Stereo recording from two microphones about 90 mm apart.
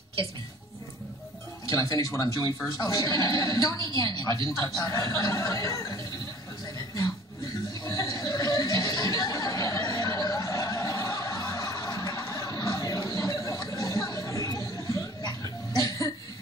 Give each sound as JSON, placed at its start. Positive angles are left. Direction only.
{"t": 1.7, "sound": "a woman's voice", "side_deg": 40}
{"t": 7.8, "sound": "chuckle", "side_deg": 40}